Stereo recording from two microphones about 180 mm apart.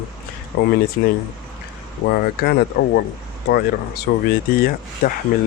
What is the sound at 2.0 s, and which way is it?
Speech, 60° left (ahead or behind).